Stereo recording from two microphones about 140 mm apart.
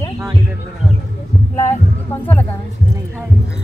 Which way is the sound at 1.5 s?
20° left (ahead or behind).